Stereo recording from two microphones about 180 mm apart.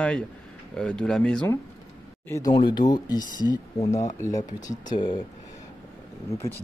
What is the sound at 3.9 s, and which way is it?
Speech, 40° left (ahead or behind).